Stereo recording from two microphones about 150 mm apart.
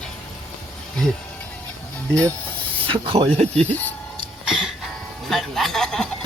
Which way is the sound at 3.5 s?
10° left (ahead or behind).